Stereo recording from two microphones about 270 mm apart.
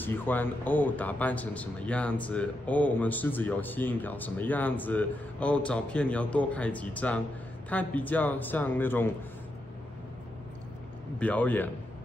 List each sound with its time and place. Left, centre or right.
0.0 s a man's voice: centre
11.1 s speech: centre